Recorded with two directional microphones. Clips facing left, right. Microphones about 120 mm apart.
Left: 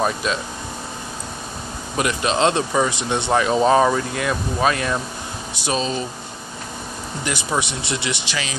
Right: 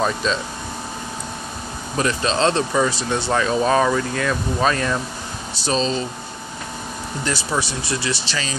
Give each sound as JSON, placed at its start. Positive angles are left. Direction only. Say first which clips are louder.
{"t": 0.0, "sound": "speech", "louder": "right 1 dB", "side_deg": 10}
{"t": 2.0, "sound": "speech", "louder": "even", "side_deg": 15}
{"t": 7.2, "sound": "speech", "louder": "even", "side_deg": 20}